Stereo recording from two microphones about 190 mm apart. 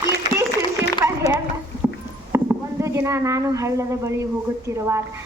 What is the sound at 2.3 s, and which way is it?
A woman's voice, 15° right (ahead or behind).